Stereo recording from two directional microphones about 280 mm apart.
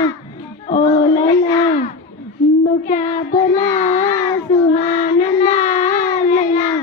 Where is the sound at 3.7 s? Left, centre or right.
Left.